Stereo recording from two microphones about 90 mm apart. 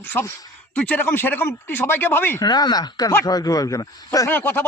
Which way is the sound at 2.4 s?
50° left (ahead or behind).